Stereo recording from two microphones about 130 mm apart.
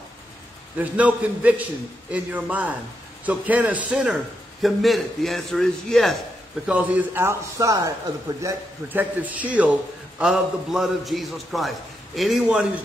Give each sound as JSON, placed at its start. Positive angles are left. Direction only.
{"t": 0.7, "sound": "a man's voice", "side_deg": -10}
{"t": 6.7, "sound": "a man's voice", "side_deg": -10}